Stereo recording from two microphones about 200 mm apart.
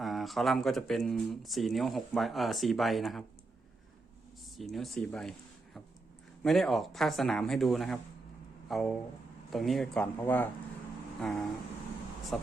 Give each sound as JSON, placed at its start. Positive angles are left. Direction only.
{"t": 0.0, "sound": "speech", "side_deg": 0}
{"t": 4.5, "sound": "speech", "side_deg": 0}
{"t": 6.4, "sound": "speech", "side_deg": 0}